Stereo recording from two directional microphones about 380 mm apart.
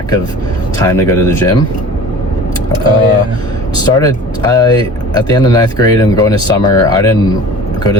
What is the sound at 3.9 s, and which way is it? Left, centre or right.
Speech, centre.